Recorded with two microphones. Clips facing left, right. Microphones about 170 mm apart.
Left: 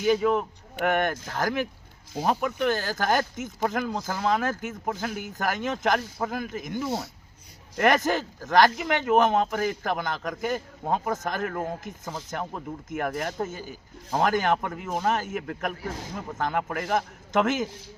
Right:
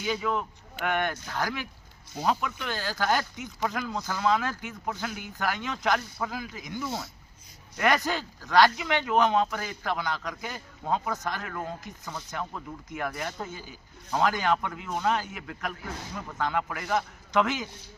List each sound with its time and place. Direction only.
0.0 s speech: 45° left (ahead or behind)
6.8 s speech: 25° left (ahead or behind)
7.8 s speech: 50° left (ahead or behind)
15.8 s a man's voice: 35° left (ahead or behind)
16.4 s speech: 45° left (ahead or behind)